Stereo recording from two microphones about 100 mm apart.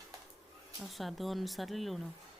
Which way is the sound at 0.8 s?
Centre (ahead or behind).